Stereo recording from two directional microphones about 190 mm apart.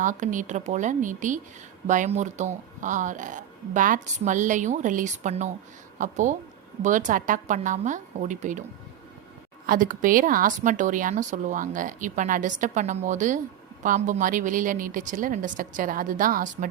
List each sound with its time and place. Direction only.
0.0 s speech: 40° right (ahead or behind)
9.6 s speech: 45° right (ahead or behind)